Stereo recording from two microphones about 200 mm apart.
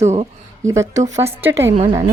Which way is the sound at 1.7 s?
30° right (ahead or behind).